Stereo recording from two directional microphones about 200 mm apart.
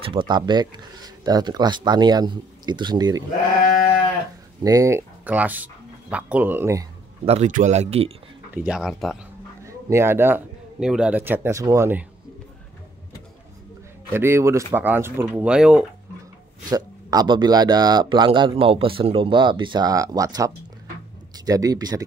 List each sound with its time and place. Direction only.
0.0 s speech: 25° right (ahead or behind)
4.6 s speech: 15° right (ahead or behind)
7.2 s speech: 35° right (ahead or behind)
8.5 s speech: 5° right (ahead or behind)
9.8 s a man's voice: 10° right (ahead or behind)
14.1 s a man's voice: 10° right (ahead or behind)
16.6 s a man's voice: 20° right (ahead or behind)